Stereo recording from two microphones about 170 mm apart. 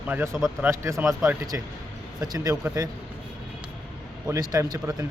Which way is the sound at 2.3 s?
20° right (ahead or behind).